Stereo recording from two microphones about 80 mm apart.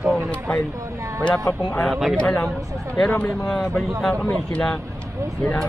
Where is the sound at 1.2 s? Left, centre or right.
Centre.